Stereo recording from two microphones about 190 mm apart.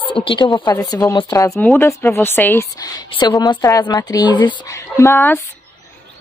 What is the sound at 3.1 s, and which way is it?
Speech, 25° left (ahead or behind).